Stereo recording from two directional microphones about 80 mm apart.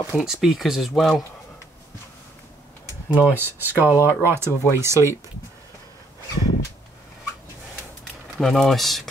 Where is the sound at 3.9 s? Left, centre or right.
Left.